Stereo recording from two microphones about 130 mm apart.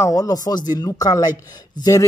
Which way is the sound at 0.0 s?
30° left (ahead or behind).